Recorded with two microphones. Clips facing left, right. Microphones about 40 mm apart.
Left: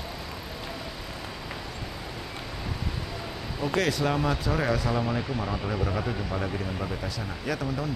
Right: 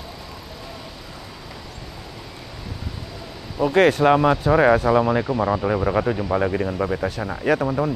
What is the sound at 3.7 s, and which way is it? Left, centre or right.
Speech, right.